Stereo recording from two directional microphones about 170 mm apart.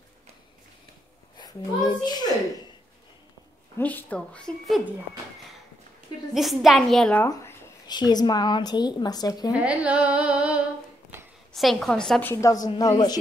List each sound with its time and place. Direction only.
2.0 s speech: 25° left (ahead or behind)
3.7 s a woman's voice: 10° left (ahead or behind)
6.3 s a woman's voice: centre (ahead or behind)
7.2 s speech: 25° left (ahead or behind)
9.5 s a woman's voice: 5° right (ahead or behind); by 13.2 s 25° left (ahead or behind)